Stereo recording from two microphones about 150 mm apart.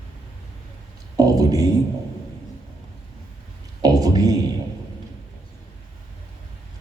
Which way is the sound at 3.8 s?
25° right (ahead or behind).